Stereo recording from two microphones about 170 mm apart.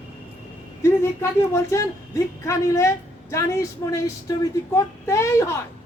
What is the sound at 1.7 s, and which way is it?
A woman's voice, 20° left (ahead or behind).